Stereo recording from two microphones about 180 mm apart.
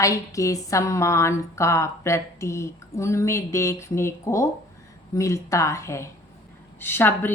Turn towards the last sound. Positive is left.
turn(degrees=10)  # may be behind; listen again after turning